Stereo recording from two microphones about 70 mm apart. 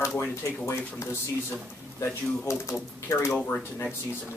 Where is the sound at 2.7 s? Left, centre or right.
Left.